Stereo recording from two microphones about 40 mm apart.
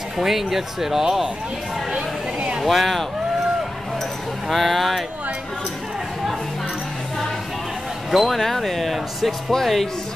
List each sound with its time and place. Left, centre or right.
0.2 s speech: centre
2.6 s speech: centre
4.5 s speech: centre
8.1 s speech: centre